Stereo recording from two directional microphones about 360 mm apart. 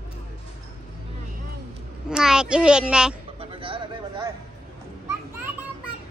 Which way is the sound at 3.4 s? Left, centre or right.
Centre.